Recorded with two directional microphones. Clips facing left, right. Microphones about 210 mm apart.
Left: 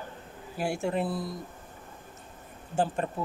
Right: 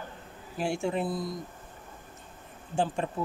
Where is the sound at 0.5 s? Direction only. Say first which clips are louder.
Even; 5° left (ahead or behind).